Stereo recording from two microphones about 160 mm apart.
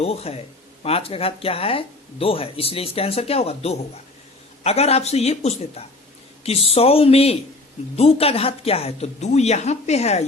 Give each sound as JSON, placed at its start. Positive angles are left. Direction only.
{"t": 0.0, "sound": "speech", "side_deg": 40}